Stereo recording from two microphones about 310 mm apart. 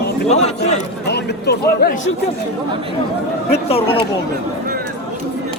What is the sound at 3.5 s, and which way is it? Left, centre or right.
Speech, centre.